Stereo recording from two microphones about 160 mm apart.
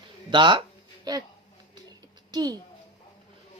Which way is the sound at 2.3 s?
25° right (ahead or behind).